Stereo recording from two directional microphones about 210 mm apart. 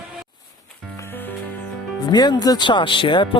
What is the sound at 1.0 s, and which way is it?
Music, 10° left (ahead or behind).